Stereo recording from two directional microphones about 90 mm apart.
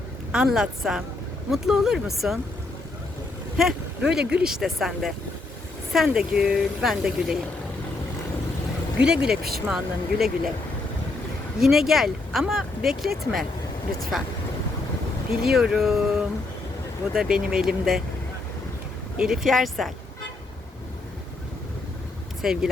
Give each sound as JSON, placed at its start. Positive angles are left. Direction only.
{"t": 0.3, "sound": "speech", "side_deg": -10}
{"t": 3.6, "sound": "a woman's voice", "side_deg": -5}
{"t": 9.0, "sound": "speech", "side_deg": -10}
{"t": 11.6, "sound": "speech", "side_deg": -5}
{"t": 15.3, "sound": "speech", "side_deg": -5}
{"t": 19.1, "sound": "speech", "side_deg": -5}
{"t": 22.4, "sound": "speech", "side_deg": -5}